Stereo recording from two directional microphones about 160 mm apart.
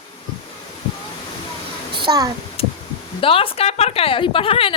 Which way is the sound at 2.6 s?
35° left (ahead or behind).